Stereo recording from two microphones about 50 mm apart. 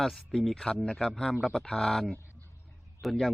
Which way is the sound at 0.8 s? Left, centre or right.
Centre.